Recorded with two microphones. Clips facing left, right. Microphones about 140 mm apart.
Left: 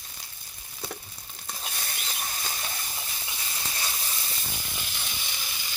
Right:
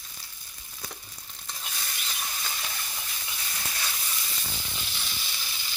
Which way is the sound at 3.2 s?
25° left (ahead or behind).